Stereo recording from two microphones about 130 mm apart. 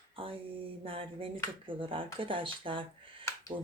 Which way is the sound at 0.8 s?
45° right (ahead or behind).